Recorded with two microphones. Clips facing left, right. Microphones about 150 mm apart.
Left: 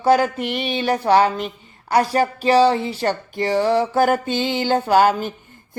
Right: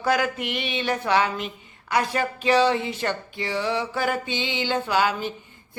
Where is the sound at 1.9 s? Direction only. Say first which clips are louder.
Left 6 dB; 40° left (ahead or behind).